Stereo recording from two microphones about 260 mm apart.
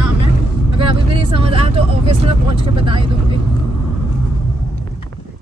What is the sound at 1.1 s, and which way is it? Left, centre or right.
Speech, right.